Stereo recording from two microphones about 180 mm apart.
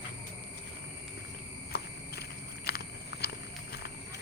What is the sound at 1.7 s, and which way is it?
Walk, 65° left (ahead or behind).